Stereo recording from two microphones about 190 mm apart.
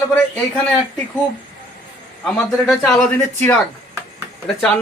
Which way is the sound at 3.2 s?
10° left (ahead or behind).